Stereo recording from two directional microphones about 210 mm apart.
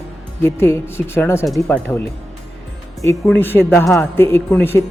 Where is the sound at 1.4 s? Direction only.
Centre (ahead or behind).